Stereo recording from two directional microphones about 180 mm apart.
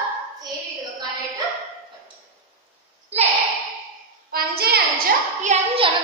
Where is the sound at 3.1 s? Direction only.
35° right (ahead or behind).